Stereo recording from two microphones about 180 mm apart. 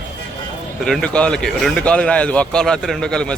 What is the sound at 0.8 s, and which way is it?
A man's voice, 5° left (ahead or behind).